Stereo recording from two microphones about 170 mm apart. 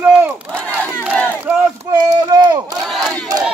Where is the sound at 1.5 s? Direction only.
10° right (ahead or behind).